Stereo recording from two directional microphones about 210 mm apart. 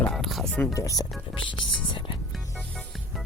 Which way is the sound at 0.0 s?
Centre (ahead or behind).